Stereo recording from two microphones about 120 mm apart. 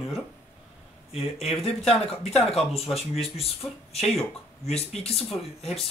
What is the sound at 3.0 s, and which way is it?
Speech, 55° left (ahead or behind).